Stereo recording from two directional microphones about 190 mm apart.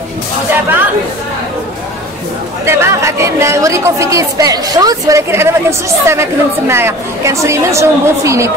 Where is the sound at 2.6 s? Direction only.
15° right (ahead or behind).